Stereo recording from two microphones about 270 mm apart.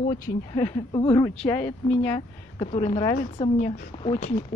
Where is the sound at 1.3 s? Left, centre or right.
Centre.